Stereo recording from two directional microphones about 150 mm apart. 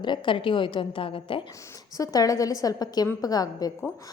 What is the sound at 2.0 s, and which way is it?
A woman's voice, 20° left (ahead or behind).